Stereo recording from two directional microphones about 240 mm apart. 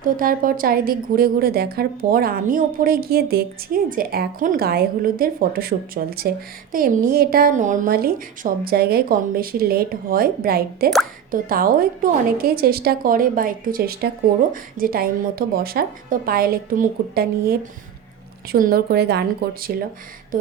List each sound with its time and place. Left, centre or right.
0.0 s a woman's voice: right